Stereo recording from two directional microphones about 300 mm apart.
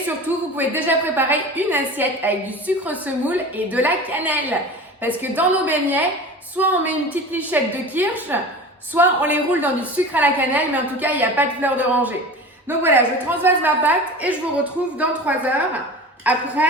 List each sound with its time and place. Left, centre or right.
0.5 s a woman's voice: centre
16.3 s a woman's voice: centre